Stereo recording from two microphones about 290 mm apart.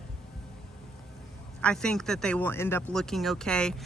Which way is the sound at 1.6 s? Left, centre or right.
Centre.